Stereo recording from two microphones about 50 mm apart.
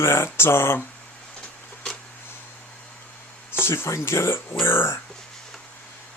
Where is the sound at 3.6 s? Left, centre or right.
Left.